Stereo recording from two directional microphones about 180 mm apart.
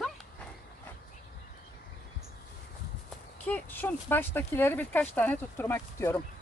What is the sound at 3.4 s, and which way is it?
Speech, 10° left (ahead or behind).